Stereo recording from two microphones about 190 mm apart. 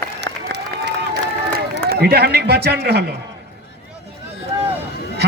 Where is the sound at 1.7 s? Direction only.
55° right (ahead or behind).